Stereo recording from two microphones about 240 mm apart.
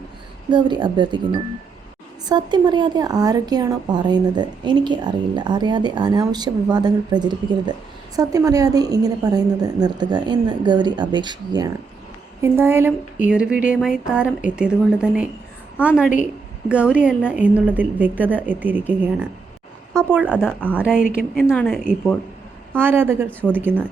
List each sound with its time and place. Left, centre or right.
0.5 s a woman's voice: centre
20.4 s speech: centre
22.8 s a woman's voice: centre